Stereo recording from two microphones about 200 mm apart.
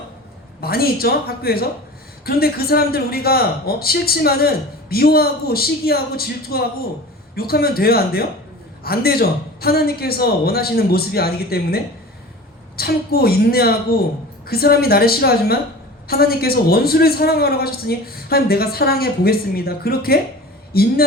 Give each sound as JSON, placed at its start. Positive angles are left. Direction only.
{"t": 0.6, "sound": "a man's voice", "side_deg": 50}